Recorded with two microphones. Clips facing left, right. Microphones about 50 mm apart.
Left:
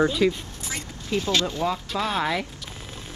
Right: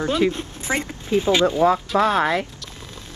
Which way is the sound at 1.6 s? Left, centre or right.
Centre.